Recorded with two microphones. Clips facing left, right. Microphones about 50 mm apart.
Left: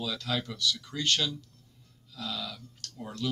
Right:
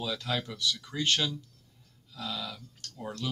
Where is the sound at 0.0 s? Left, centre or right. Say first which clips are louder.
Even; centre.